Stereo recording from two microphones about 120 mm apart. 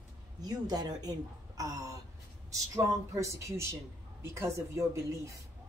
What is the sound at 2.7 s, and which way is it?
Speech, 25° right (ahead or behind).